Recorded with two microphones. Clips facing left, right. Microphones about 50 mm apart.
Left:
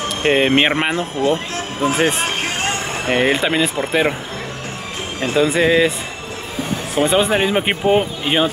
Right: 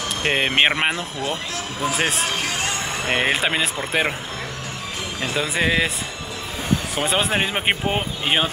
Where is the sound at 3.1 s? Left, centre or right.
Centre.